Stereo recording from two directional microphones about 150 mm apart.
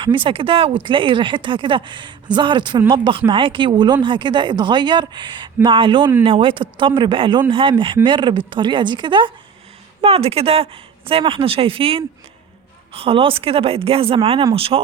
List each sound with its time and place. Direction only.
0.0 s speech: 35° right (ahead or behind)